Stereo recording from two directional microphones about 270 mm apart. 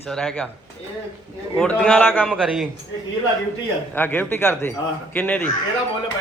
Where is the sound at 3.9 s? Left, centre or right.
Centre.